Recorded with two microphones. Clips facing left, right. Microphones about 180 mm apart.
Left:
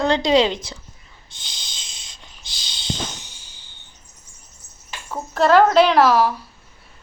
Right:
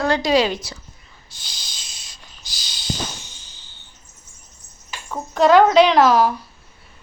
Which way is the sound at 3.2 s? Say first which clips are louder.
Right 1 dB; 15° left (ahead or behind).